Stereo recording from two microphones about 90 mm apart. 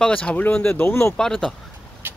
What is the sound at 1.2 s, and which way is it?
Speech, 5° left (ahead or behind).